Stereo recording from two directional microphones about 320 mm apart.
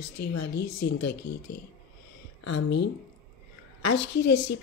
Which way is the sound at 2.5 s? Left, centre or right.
Left.